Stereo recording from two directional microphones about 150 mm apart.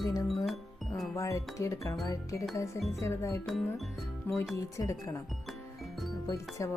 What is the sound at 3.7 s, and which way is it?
Music, centre (ahead or behind).